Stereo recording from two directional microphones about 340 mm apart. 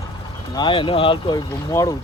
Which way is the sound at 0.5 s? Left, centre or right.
Centre.